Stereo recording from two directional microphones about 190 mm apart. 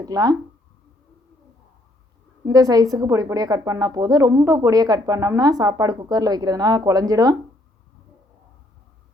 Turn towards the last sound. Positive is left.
turn(degrees=-20)  # may be behind; listen again after turning